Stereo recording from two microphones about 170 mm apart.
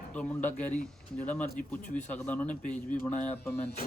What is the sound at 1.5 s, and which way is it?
Speech, 55° left (ahead or behind).